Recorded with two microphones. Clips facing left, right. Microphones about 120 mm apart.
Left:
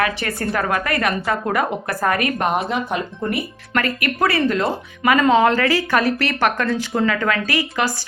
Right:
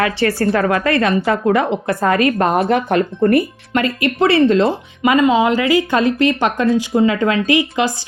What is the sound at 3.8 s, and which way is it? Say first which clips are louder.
Speech: right 4 dB; 25° right (ahead or behind).